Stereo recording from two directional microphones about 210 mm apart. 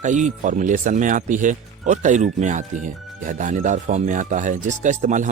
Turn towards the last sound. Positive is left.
turn(degrees=-35)  # may be behind; listen again after turning